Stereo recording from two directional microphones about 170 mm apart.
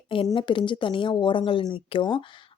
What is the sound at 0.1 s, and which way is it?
A woman's voice, 30° left (ahead or behind).